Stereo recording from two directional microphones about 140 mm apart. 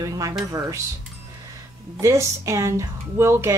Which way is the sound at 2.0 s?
20° right (ahead or behind).